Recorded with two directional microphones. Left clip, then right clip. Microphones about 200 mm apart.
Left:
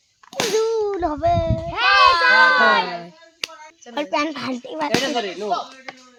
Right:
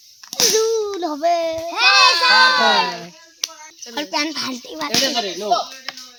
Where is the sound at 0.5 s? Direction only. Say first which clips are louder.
Left 1 dB; 40° left (ahead or behind).